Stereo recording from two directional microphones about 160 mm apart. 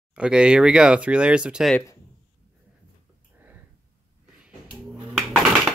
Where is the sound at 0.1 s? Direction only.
5° right (ahead or behind).